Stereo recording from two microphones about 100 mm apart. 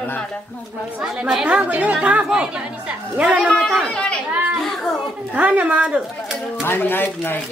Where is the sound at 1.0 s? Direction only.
5° right (ahead or behind).